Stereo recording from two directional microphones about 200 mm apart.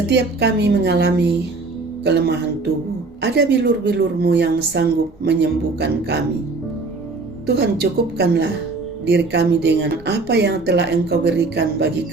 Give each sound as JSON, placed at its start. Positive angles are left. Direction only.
{"t": 0.1, "sound": "speech", "side_deg": -60}
{"t": 7.4, "sound": "speech", "side_deg": -55}